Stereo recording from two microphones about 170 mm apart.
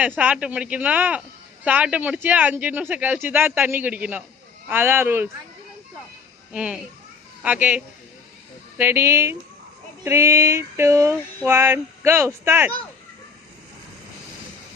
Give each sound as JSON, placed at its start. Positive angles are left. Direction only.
{"t": 0.2, "sound": "speech", "side_deg": -5}
{"t": 6.5, "sound": "a child's voice", "side_deg": -5}
{"t": 8.8, "sound": "speech", "side_deg": -15}